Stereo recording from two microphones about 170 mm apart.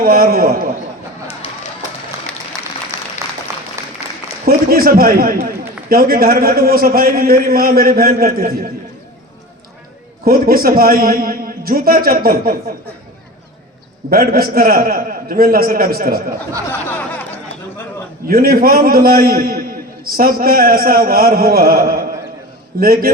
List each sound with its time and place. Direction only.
0.0 s a man's voice: 60° right (ahead or behind)
3.8 s applause: 20° right (ahead or behind)
4.4 s a man's voice: 60° right (ahead or behind)
10.2 s a man's voice: 60° right (ahead or behind)
14.1 s a man's voice: 60° right (ahead or behind)
18.3 s a man's voice: 60° right (ahead or behind)